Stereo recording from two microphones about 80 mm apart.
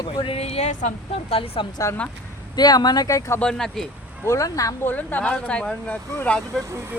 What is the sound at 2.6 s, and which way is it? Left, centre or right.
Speech, left.